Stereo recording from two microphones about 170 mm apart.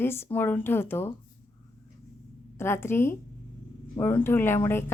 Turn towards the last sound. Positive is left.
turn(degrees=15)  # may be behind; listen again after turning